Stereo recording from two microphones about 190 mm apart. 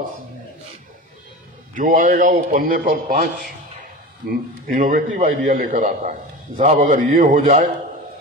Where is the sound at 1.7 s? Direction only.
45° right (ahead or behind).